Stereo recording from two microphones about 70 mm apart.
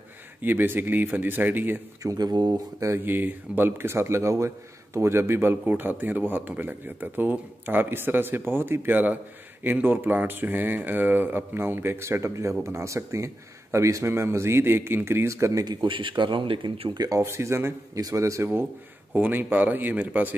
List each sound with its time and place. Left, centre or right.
0.4 s speech: right
2.1 s speech: right
3.0 s speech: right
16.2 s speech: right
16.9 s speech: right
17.2 s speech: right
17.9 s a man's voice: right
19.1 s speech: right